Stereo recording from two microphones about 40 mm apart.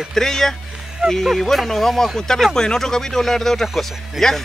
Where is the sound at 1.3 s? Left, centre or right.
Centre.